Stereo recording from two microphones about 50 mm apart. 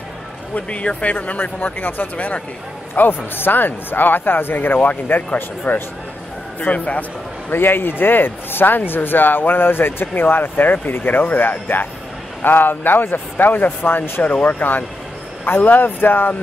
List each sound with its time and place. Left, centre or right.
0.6 s a man's voice: left
14.2 s a man's voice: left